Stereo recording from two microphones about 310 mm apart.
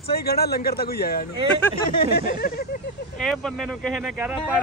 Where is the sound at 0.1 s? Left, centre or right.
Left.